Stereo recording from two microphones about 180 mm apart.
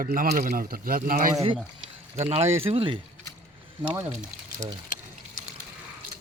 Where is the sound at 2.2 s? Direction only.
35° right (ahead or behind).